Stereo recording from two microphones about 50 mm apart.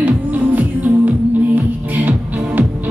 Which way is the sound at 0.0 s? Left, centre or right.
Right.